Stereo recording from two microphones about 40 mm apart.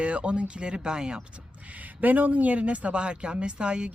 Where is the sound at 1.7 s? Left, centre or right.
Right.